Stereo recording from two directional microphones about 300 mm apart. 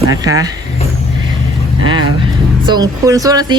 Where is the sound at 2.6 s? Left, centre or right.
Centre.